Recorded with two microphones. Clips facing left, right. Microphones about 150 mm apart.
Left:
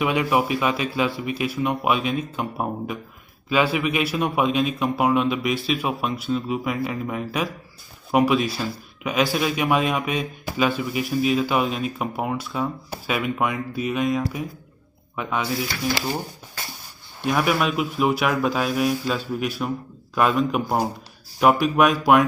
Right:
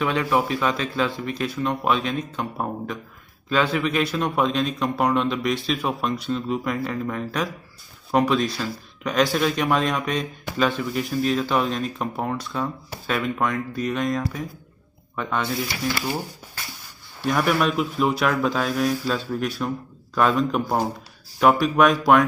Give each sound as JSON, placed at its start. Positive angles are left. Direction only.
{"t": 0.0, "sound": "a man's voice", "side_deg": 10}
{"t": 17.2, "sound": "speech", "side_deg": 5}